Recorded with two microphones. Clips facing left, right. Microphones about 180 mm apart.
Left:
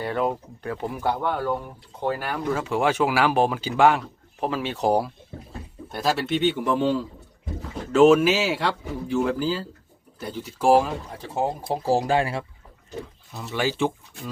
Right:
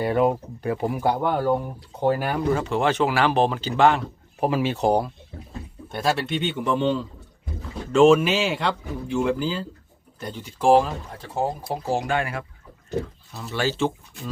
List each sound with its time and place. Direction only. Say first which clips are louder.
0.0 s speech: right 5 dB; 15° right (ahead or behind)
2.5 s speech: even; 5° left (ahead or behind)
4.4 s a man's voice: right 4 dB; 10° right (ahead or behind); by 11.5 s 15° left (ahead or behind)
11.7 s speech: left 7 dB; 35° left (ahead or behind)
13.3 s speech: even; 15° left (ahead or behind)